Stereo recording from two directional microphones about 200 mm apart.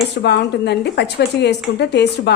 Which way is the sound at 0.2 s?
55° left (ahead or behind).